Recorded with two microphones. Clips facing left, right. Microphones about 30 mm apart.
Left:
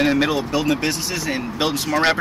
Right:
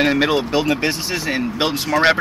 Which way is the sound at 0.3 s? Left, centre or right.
Right.